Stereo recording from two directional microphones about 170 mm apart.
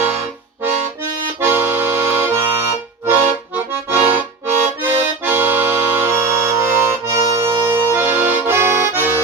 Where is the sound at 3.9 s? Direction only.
10° right (ahead or behind).